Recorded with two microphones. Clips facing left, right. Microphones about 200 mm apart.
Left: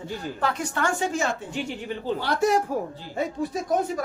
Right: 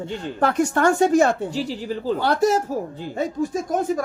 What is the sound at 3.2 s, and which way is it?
Speech, 45° right (ahead or behind).